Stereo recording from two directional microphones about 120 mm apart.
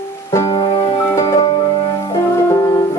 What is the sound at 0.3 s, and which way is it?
Music, 30° left (ahead or behind).